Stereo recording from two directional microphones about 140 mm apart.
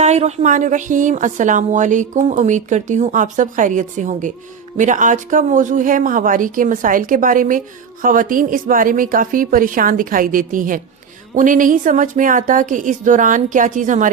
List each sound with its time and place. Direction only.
0.0 s speech: 50° right (ahead or behind)